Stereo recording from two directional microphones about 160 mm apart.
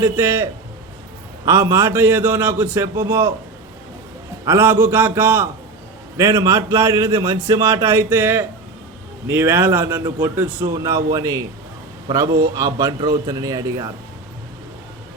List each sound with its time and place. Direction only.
0.0 s a man's voice: 15° right (ahead or behind)
1.5 s a man's voice: 15° right (ahead or behind)
4.4 s a man's voice: 15° right (ahead or behind)